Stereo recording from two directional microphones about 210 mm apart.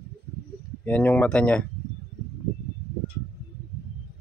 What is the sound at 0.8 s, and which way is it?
Speech, 5° left (ahead or behind).